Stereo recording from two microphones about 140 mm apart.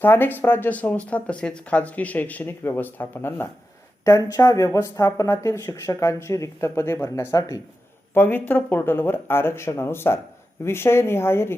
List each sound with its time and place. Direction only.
0.0 s speech: 15° left (ahead or behind)